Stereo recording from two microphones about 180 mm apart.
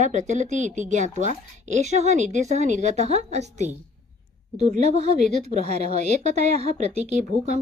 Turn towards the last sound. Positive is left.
turn(degrees=-40)  # may be behind; listen again after turning